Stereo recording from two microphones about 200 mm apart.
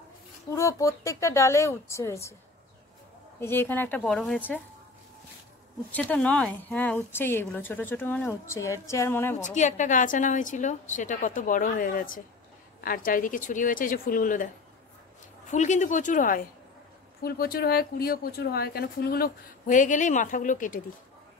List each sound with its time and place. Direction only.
0.6 s speech: 15° left (ahead or behind)
3.3 s speech: 10° left (ahead or behind)
5.9 s speech: 5° left (ahead or behind)
9.4 s a woman's voice: 35° left (ahead or behind)
15.5 s a woman's voice: 35° left (ahead or behind)